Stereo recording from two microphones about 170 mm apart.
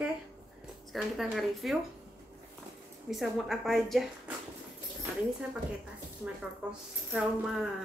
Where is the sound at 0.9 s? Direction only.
Centre (ahead or behind).